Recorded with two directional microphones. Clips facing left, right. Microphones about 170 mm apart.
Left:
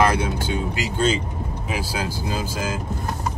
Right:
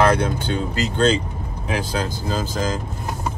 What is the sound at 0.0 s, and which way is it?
Speech, 5° left (ahead or behind).